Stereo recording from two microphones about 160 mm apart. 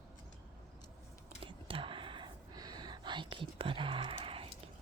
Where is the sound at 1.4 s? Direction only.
35° right (ahead or behind).